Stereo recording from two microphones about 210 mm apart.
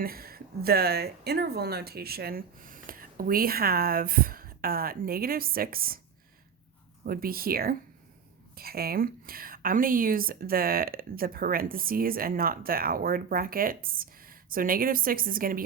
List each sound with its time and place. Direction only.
0.0 s a woman's voice: 45° right (ahead or behind)
7.0 s a woman's voice: 45° right (ahead or behind)